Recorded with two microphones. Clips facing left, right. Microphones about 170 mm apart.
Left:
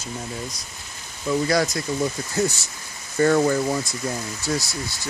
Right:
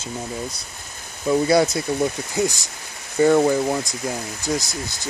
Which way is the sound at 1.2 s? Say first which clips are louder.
Right 4 dB; 25° right (ahead or behind).